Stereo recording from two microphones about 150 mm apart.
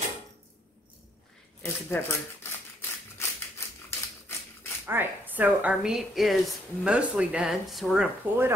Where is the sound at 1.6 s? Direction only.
15° left (ahead or behind).